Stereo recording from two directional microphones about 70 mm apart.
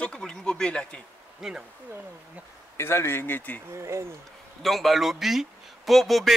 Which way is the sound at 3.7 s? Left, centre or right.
Right.